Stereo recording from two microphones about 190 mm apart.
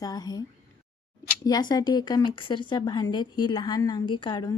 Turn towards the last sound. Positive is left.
turn(degrees=25)  # may be behind; listen again after turning